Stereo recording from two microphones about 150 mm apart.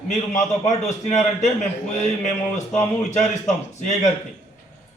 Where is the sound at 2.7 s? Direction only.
50° left (ahead or behind).